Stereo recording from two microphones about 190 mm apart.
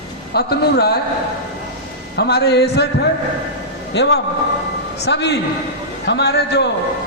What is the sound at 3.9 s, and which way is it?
A man's voice, 65° left (ahead or behind).